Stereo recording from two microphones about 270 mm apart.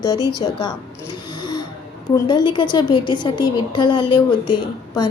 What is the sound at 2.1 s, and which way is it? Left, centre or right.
A woman's voice, centre.